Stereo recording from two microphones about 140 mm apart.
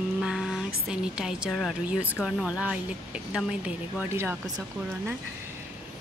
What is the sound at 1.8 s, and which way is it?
Speech, 10° right (ahead or behind).